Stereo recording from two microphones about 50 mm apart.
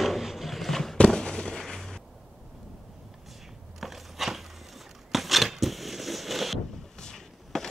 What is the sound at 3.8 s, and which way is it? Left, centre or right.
Crushing, centre.